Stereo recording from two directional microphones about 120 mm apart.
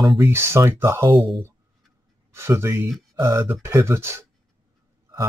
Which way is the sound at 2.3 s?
20° right (ahead or behind).